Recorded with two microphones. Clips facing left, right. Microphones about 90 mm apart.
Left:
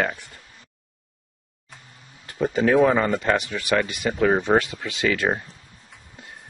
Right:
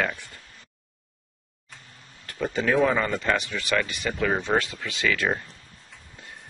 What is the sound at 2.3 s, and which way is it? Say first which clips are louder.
Speech: left 4 dB; 25° left (ahead or behind).